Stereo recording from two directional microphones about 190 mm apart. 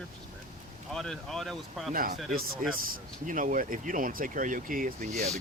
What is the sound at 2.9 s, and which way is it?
Speech, 45° right (ahead or behind).